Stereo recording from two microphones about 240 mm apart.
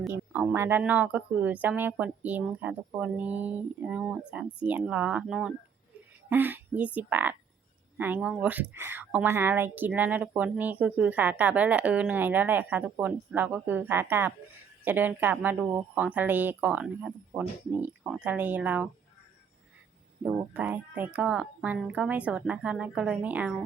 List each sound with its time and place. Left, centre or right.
0.0 s a woman's voice: centre
20.2 s speech: centre